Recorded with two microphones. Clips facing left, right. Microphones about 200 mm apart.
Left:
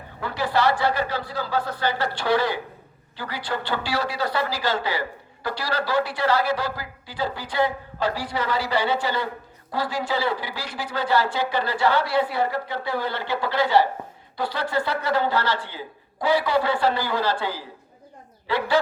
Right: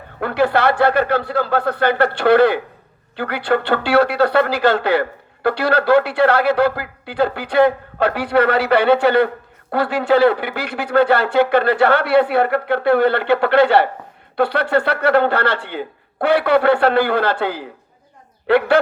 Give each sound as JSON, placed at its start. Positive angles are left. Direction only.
{"t": 0.2, "sound": "speech", "side_deg": -60}